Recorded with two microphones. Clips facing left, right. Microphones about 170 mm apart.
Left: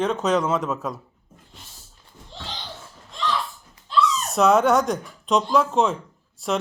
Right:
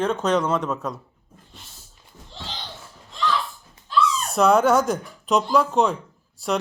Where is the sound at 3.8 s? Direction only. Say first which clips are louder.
Even; 20° left (ahead or behind).